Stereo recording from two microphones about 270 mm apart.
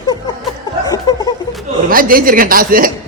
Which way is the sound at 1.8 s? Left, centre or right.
Right.